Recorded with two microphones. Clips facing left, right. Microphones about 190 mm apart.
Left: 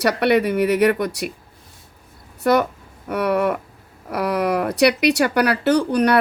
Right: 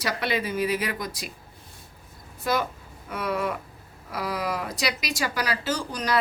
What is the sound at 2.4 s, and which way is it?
Speech, 65° left (ahead or behind).